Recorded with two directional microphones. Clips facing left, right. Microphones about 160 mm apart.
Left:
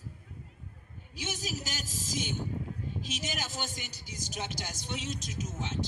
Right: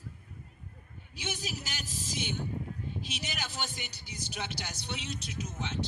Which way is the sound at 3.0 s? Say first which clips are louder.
Left 2 dB; 45° left (ahead or behind).